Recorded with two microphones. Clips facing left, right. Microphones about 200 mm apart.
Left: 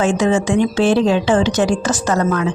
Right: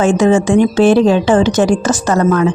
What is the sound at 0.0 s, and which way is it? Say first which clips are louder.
Speech: right 5 dB; 50° right (ahead or behind).